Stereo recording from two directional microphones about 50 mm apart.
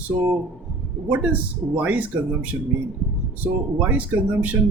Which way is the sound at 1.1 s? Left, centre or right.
Right.